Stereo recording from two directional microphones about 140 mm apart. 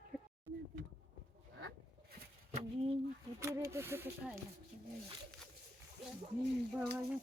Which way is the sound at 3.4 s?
20° right (ahead or behind).